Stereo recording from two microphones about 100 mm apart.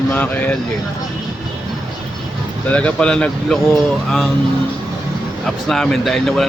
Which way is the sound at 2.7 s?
10° left (ahead or behind).